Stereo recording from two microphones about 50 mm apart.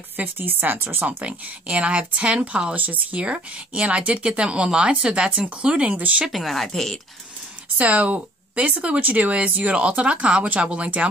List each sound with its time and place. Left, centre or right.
0.2 s speech: right
1.0 s speech: right
6.2 s speech: centre
7.7 s speech: right